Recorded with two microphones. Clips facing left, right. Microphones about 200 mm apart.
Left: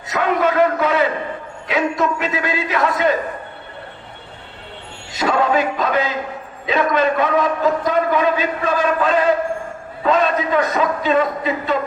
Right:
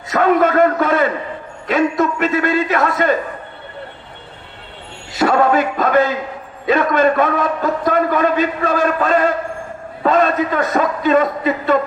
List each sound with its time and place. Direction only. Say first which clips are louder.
0.1 s a man's voice: right 4 dB; 50° right (ahead or behind)
5.2 s a man's voice: right 3 dB; 50° right (ahead or behind)